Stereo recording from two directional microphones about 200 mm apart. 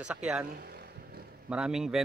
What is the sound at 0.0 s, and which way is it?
Speech, 5° right (ahead or behind).